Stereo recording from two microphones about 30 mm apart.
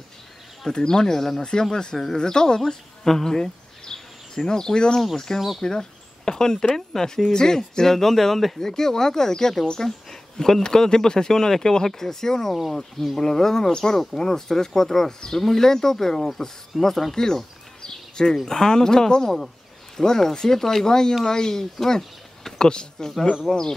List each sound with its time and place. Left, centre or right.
0.7 s speech: left
2.6 s a sound: centre
4.5 s speech: left
9.8 s a sound: centre
10.6 s speech: left
16.7 s speech: centre
17.1 s speech: centre
17.8 s a sound: left
18.4 s speech: left
19.2 s speech: centre; by 23.6 s left